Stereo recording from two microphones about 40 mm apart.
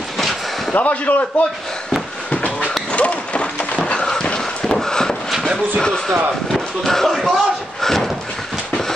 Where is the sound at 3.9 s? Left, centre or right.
Centre.